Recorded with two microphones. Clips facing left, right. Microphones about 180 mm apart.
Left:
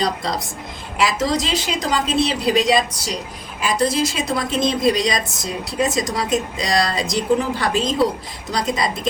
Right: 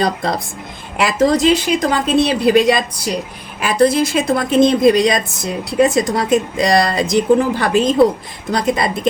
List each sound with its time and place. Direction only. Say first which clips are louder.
0.0 s a woman's voice: right 4 dB; 55° right (ahead or behind)